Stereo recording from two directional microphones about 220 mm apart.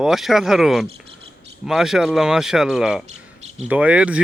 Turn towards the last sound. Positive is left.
turn(degrees=-5)  # may be behind; listen again after turning